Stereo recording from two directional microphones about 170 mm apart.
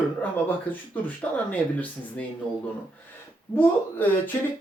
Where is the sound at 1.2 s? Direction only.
10° left (ahead or behind).